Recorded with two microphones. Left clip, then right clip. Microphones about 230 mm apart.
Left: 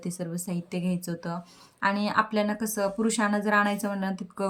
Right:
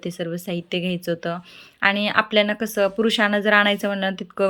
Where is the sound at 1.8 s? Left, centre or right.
Centre.